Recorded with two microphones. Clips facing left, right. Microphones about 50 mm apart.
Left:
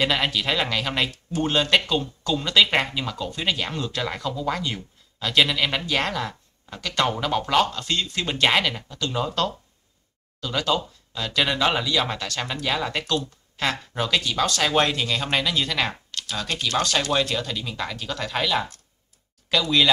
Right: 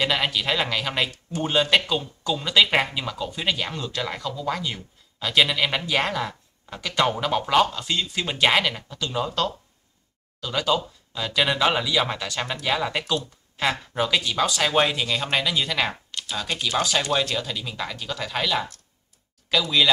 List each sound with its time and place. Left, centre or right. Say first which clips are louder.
0.0 s speech: left 1 dB; centre
16.1 s computer keyboard: even; centre
16.3 s speech: even; centre